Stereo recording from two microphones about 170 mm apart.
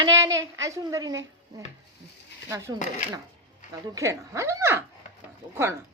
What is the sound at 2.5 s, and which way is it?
Speech, 15° right (ahead or behind).